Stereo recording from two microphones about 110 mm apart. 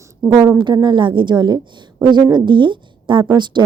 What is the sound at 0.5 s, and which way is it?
A woman's voice, 45° right (ahead or behind).